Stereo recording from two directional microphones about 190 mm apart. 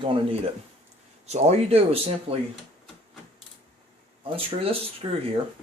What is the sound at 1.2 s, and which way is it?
Speech, 35° right (ahead or behind).